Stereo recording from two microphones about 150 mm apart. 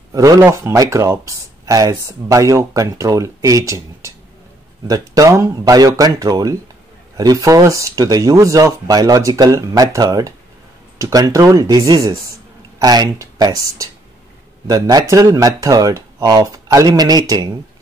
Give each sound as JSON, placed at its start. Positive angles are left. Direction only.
{"t": 0.1, "sound": "speech", "side_deg": -20}
{"t": 14.7, "sound": "speech", "side_deg": -25}